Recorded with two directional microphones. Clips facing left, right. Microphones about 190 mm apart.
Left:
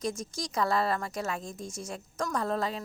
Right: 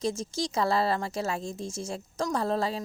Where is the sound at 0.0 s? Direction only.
25° right (ahead or behind).